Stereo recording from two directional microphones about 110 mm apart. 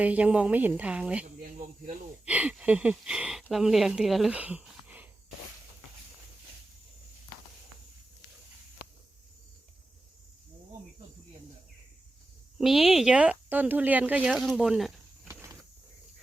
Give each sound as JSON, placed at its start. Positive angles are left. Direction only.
{"t": 0.0, "sound": "speech", "side_deg": -15}
{"t": 4.4, "sound": "speech", "side_deg": -10}
{"t": 12.5, "sound": "speech", "side_deg": -5}
{"t": 15.3, "sound": "a sound", "side_deg": -25}